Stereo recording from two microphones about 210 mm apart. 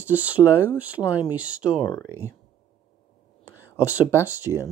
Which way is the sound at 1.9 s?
10° left (ahead or behind).